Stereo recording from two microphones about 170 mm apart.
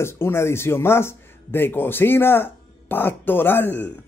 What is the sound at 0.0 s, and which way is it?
Speech, 15° left (ahead or behind).